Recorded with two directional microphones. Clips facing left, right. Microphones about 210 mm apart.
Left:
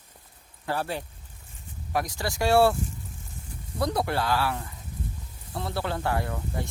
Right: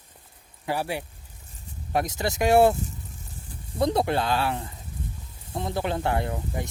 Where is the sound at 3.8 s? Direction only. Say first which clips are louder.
Right 4 dB; 20° right (ahead or behind).